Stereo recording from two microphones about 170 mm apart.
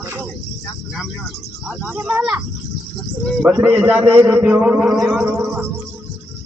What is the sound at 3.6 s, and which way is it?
A man's voice, 10° right (ahead or behind).